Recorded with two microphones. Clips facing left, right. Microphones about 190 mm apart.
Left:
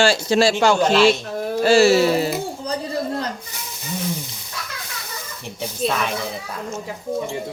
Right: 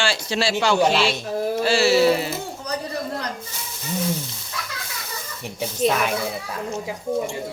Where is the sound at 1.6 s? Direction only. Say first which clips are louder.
Left 4 dB; 45° left (ahead or behind).